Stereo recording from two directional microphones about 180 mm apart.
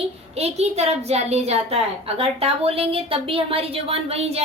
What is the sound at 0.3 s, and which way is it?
A woman's voice, 35° right (ahead or behind).